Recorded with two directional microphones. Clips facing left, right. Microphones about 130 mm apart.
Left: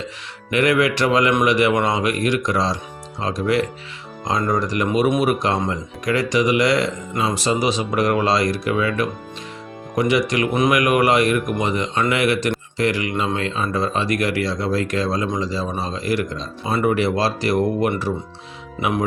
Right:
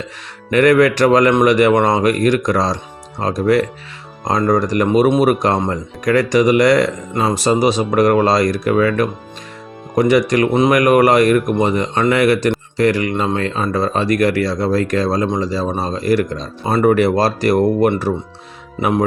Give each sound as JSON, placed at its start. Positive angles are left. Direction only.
{"t": 0.5, "sound": "a man's voice", "side_deg": -45}
{"t": 4.9, "sound": "speech", "side_deg": -30}